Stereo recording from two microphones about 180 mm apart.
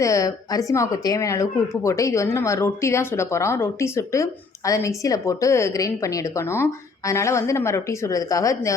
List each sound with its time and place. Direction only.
0.0 s a woman's voice: 20° left (ahead or behind)